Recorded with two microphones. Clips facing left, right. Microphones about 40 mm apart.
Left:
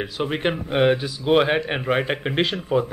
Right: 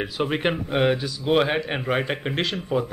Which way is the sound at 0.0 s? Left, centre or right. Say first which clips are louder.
Even; centre.